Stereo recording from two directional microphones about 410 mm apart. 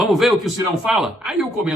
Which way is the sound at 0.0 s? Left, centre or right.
Centre.